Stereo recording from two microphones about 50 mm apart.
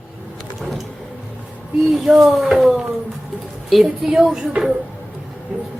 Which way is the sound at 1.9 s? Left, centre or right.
Centre.